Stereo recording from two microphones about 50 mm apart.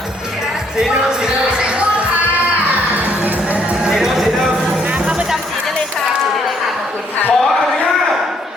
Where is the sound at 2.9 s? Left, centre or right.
Right.